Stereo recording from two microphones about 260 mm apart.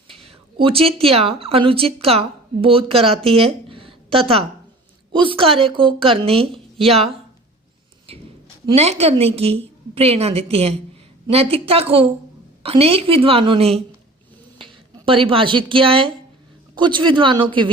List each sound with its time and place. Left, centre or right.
0.1 s a woman's voice: right